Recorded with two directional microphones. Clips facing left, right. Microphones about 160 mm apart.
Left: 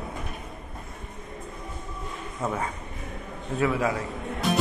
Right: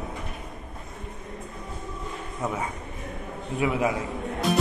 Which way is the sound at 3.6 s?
15° right (ahead or behind).